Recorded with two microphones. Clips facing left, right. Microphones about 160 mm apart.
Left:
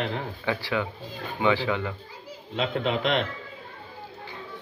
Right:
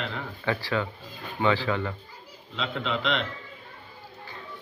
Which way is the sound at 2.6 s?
45° left (ahead or behind).